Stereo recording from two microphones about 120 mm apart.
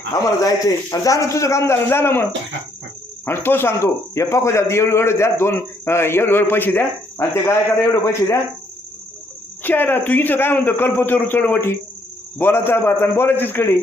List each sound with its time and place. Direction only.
0.4 s speech: 30° left (ahead or behind)
3.2 s speech: 20° left (ahead or behind)
9.6 s a man's voice: 15° left (ahead or behind)